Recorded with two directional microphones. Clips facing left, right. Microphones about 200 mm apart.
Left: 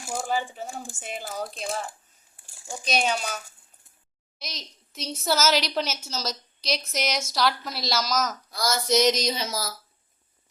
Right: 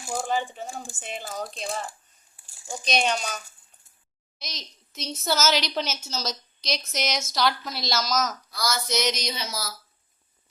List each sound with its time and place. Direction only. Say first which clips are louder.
0.2 s a woman's voice: even; 5° left (ahead or behind)
8.4 s speech: left 3 dB; 45° left (ahead or behind)